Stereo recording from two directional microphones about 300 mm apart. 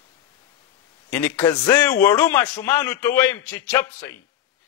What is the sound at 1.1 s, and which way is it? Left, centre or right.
A man's voice, centre.